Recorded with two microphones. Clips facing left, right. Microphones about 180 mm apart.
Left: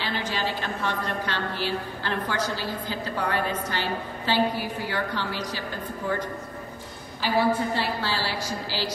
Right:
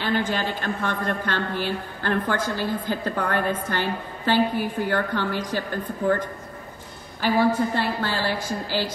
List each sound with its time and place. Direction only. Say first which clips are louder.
0.0 s a woman's voice: right 4 dB; 50° right (ahead or behind)
7.2 s a woman's voice: right 3 dB; 50° right (ahead or behind)